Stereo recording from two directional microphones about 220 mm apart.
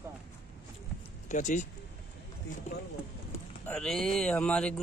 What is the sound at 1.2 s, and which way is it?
Speech, 35° left (ahead or behind).